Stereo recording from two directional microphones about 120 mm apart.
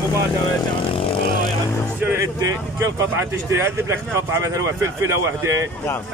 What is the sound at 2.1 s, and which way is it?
Speech, 30° right (ahead or behind).